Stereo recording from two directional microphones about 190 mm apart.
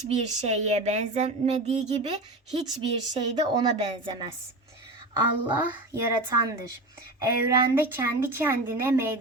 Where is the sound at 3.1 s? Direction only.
30° right (ahead or behind).